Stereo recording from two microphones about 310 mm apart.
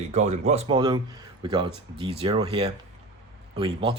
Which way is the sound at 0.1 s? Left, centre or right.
Right.